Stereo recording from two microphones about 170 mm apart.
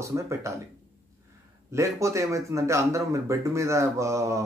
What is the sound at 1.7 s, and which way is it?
Speech, 15° right (ahead or behind).